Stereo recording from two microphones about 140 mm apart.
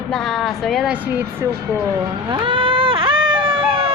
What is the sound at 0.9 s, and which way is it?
Speech, 15° right (ahead or behind).